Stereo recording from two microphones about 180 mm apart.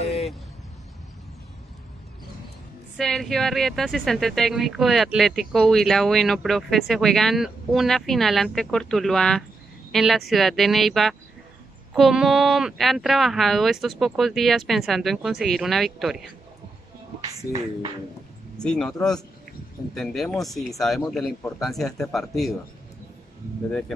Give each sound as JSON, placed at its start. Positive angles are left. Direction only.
{"t": 3.0, "sound": "speech", "side_deg": 0}
{"t": 18.6, "sound": "speech", "side_deg": 5}